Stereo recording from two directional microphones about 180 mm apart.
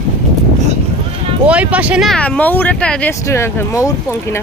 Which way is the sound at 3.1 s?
15° left (ahead or behind).